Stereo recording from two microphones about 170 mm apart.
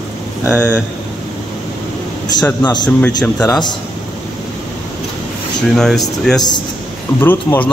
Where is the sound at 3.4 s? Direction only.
25° left (ahead or behind).